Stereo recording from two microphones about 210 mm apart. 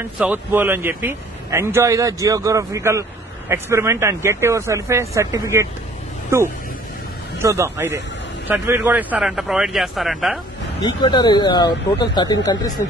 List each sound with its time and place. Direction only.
0.2 s a man's voice: 10° right (ahead or behind)
7.3 s a man's voice: 15° right (ahead or behind)
10.8 s speech: 20° left (ahead or behind)